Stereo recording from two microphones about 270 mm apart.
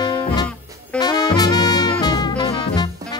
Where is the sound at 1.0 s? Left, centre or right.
Centre.